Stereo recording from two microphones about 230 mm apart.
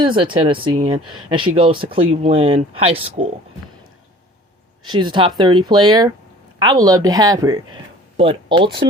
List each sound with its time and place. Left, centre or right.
0.0 s speech: right
4.9 s a woman's voice: centre